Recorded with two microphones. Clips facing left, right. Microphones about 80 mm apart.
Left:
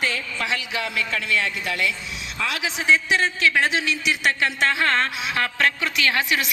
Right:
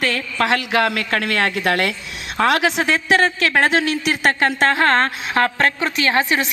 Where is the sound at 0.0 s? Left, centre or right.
Right.